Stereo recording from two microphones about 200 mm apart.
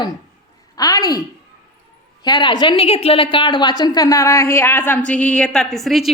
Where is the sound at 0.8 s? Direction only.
20° left (ahead or behind).